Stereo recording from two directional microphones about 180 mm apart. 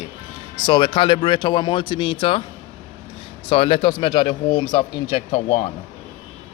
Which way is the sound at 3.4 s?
30° left (ahead or behind).